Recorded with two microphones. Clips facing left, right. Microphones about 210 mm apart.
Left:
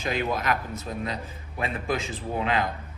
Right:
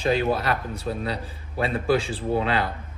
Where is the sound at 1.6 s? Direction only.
30° right (ahead or behind).